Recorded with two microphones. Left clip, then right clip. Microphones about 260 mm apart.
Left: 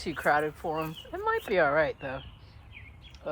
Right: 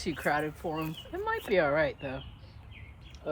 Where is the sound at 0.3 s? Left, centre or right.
Left.